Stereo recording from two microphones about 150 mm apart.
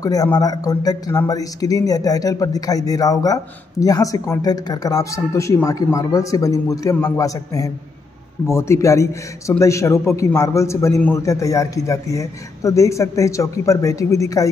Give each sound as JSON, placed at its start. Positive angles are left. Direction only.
{"t": 0.0, "sound": "speech", "side_deg": 25}